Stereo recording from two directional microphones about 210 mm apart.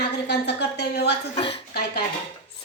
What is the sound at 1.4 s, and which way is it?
Speech, 25° left (ahead or behind).